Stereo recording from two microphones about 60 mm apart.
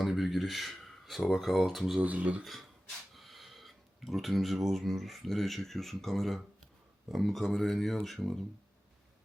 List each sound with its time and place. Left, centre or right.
0.0 s a sound: centre
2.0 s speech: right
2.4 s speech: centre